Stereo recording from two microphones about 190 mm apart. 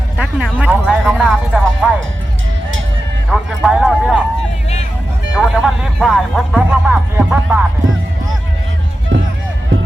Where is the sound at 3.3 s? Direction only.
5° right (ahead or behind).